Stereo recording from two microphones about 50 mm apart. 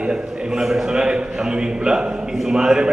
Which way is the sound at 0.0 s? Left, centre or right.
Centre.